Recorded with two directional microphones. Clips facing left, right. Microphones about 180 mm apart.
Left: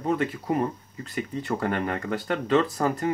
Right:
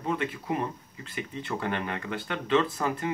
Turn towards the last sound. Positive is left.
turn(degrees=40)  # may be behind; listen again after turning